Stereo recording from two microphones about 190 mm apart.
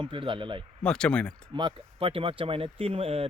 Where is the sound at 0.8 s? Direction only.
5° left (ahead or behind).